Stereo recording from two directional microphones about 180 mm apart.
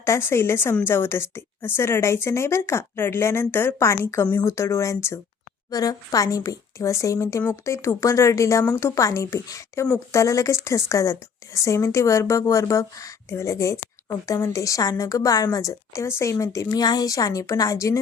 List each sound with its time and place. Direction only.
0.0 s a woman's voice: 15° left (ahead or behind)